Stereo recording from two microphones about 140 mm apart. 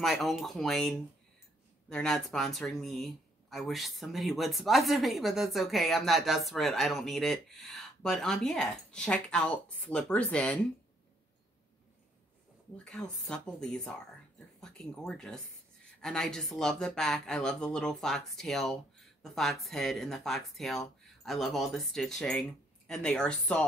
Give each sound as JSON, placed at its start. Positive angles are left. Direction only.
{"t": 0.0, "sound": "speech", "side_deg": 0}
{"t": 12.7, "sound": "speech", "side_deg": 5}